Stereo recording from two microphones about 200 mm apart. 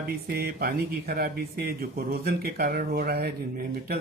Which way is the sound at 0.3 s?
50° right (ahead or behind).